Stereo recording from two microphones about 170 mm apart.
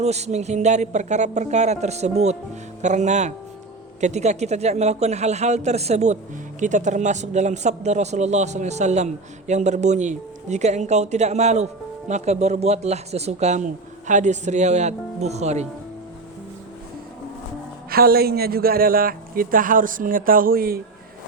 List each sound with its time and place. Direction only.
0.0 s speech: 40° right (ahead or behind)
17.9 s a man's voice: 65° right (ahead or behind)